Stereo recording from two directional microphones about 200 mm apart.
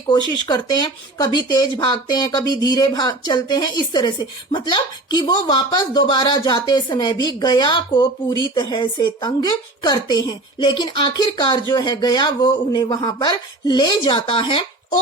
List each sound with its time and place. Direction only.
0.1 s speech: 20° left (ahead or behind)